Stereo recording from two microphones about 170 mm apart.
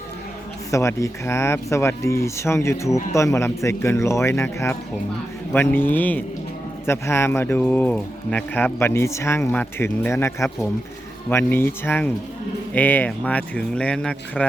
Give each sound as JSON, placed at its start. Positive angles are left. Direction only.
{"t": 0.7, "sound": "speech", "side_deg": 15}